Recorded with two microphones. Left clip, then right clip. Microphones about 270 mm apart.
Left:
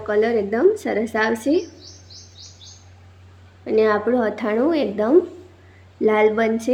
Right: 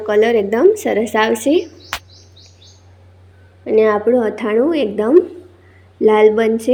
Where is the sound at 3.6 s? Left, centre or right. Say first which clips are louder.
Right 5 dB; centre.